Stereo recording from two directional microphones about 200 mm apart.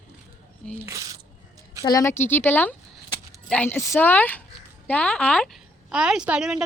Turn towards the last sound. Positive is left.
turn(degrees=-5)  # may be behind; listen again after turning